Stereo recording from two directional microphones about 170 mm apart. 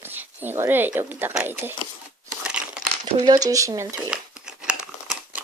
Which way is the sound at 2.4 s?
5° right (ahead or behind).